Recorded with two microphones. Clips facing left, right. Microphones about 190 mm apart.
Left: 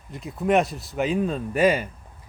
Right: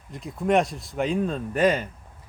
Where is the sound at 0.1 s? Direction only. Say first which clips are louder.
Left 1 dB; 5° left (ahead or behind).